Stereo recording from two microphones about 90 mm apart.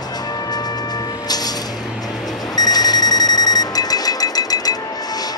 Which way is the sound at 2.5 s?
45° left (ahead or behind).